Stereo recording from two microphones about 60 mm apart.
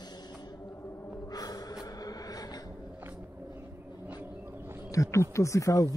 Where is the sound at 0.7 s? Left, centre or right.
Left.